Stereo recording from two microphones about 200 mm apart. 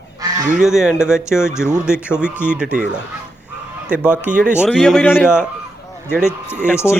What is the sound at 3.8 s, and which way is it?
Speech, 5° right (ahead or behind).